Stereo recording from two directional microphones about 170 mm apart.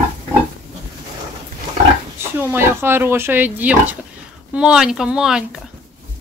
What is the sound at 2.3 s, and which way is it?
Speech, 15° right (ahead or behind).